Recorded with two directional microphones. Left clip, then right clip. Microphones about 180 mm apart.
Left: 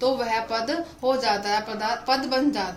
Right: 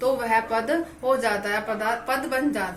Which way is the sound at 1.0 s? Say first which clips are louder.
Left 1 dB; 50° left (ahead or behind).